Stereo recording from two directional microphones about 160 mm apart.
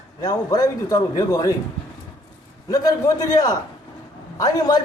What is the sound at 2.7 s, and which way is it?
A man's voice, 20° left (ahead or behind).